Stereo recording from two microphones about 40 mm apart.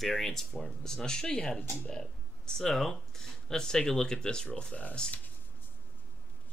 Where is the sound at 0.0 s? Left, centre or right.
Centre.